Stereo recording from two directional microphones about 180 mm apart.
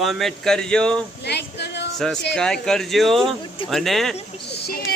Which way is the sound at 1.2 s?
65° left (ahead or behind).